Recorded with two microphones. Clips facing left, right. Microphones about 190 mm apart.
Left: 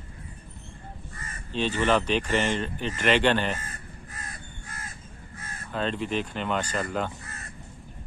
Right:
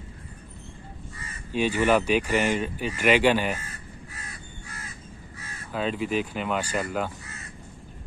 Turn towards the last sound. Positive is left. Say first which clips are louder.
# even
turn(degrees=50)  # may be behind; listen again after turning